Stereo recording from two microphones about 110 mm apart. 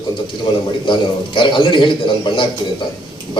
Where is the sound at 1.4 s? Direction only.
50° left (ahead or behind).